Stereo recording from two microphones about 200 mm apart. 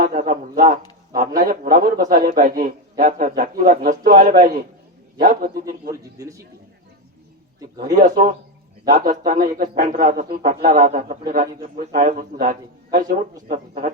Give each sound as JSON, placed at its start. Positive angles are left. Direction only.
{"t": 0.0, "sound": "a sound", "side_deg": -40}
{"t": 1.4, "sound": "a man's voice", "side_deg": -45}
{"t": 5.9, "sound": "a man's voice", "side_deg": -15}
{"t": 7.9, "sound": "a man's voice", "side_deg": -40}